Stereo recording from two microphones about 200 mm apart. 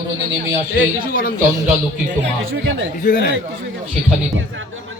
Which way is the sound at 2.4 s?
70° right (ahead or behind).